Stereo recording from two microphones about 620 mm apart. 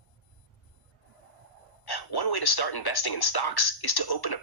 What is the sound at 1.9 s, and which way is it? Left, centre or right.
Speech, left.